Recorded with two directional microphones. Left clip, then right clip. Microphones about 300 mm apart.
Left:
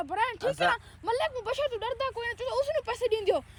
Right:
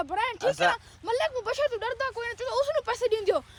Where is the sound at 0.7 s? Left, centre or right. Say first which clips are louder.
Right 1 dB; centre.